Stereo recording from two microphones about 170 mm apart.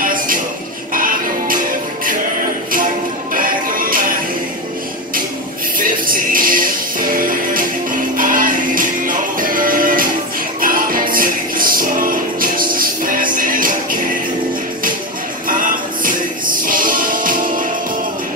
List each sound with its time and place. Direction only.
0.0 s music: 55° right (ahead or behind)
3.3 s music: 55° right (ahead or behind)
5.8 s music: 55° right (ahead or behind)
15.4 s music: 55° right (ahead or behind)